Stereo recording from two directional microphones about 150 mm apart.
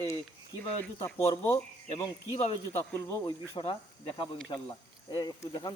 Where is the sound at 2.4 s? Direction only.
45° left (ahead or behind).